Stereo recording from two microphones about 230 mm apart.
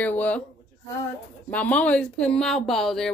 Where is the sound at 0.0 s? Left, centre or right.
Centre.